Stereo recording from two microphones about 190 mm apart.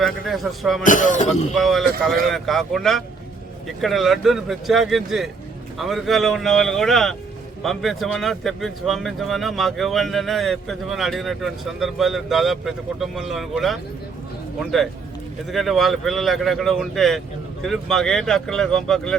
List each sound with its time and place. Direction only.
0.0 s a man's voice: centre (ahead or behind)
0.9 s speech: 40° left (ahead or behind)
1.5 s a man's voice: centre (ahead or behind)